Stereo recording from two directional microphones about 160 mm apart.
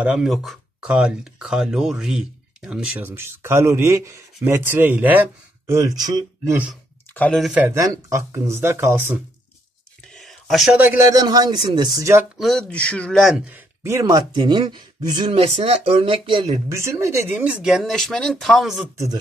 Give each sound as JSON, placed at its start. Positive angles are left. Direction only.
{"t": 0.0, "sound": "speech", "side_deg": -5}
{"t": 7.1, "sound": "speech", "side_deg": 10}
{"t": 7.5, "sound": "speech", "side_deg": -15}
{"t": 10.0, "sound": "whispering", "side_deg": 0}
{"t": 10.8, "sound": "speech", "side_deg": -15}
{"t": 12.4, "sound": "speech", "side_deg": 5}
{"t": 13.5, "sound": "speech", "side_deg": -15}
{"t": 14.3, "sound": "speech", "side_deg": -30}
{"t": 16.4, "sound": "speech", "side_deg": -20}